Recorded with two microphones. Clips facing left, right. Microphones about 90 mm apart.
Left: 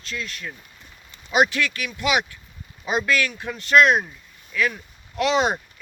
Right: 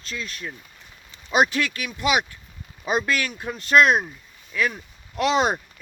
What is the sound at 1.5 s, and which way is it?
Speech, 35° right (ahead or behind).